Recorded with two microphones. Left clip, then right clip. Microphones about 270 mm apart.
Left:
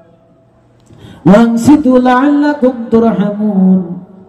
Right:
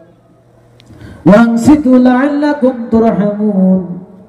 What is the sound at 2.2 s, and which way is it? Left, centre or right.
Music, left.